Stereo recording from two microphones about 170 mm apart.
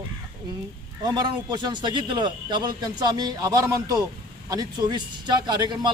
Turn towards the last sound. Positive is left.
turn(degrees=-25)  # may be behind; listen again after turning